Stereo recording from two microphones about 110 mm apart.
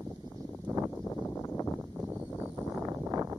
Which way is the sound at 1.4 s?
25° left (ahead or behind).